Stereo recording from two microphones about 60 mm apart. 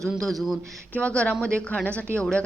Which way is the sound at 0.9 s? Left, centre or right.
Centre.